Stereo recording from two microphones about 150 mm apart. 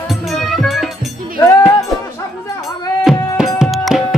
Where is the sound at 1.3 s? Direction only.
20° left (ahead or behind).